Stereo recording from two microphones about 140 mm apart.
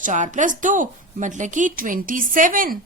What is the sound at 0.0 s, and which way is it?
A woman's voice, 65° right (ahead or behind).